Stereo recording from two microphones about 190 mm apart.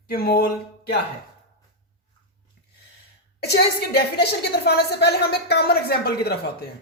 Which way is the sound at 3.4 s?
60° left (ahead or behind).